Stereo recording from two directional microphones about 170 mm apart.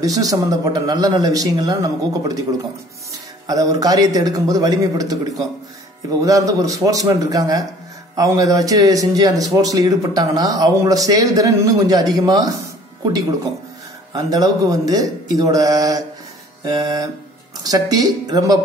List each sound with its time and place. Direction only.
0.0 s speech: 20° right (ahead or behind)
14.1 s speech: 20° right (ahead or behind)